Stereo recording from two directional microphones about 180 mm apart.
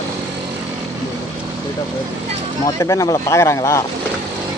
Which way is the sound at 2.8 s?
20° left (ahead or behind).